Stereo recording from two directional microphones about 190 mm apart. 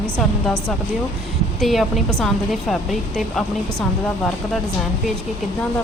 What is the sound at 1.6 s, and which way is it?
Speech, centre (ahead or behind).